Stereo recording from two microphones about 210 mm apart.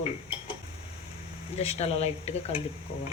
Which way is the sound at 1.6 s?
30° left (ahead or behind).